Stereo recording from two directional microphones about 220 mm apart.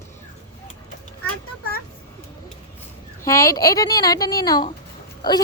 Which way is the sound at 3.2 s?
15° left (ahead or behind).